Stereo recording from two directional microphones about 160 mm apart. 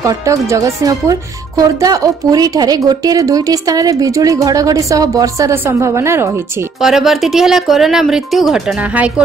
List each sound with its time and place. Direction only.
0.0 s a woman's voice: 20° right (ahead or behind)
6.8 s speech: centre (ahead or behind)